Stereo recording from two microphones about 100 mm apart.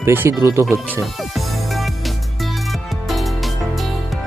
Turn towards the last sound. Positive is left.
turn(degrees=0)  # may be behind; listen again after turning